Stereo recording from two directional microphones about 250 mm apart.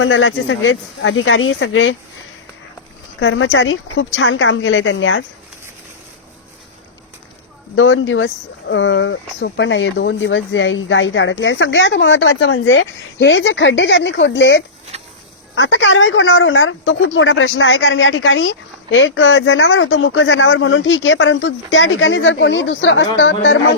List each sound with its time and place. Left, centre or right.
0.0 s speech: left
3.2 s speech: left
7.8 s speech: left